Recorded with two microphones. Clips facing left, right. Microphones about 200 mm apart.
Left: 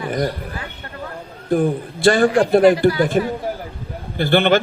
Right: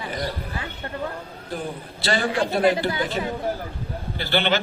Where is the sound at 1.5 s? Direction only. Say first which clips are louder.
Left 14 dB; 50° left (ahead or behind).